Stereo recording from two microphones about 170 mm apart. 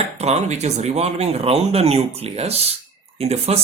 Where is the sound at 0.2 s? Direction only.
40° right (ahead or behind).